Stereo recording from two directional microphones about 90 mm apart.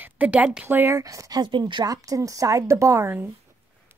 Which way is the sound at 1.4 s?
60° right (ahead or behind).